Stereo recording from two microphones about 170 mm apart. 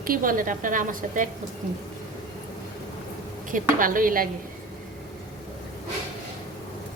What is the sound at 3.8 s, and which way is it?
Speech, 55° right (ahead or behind).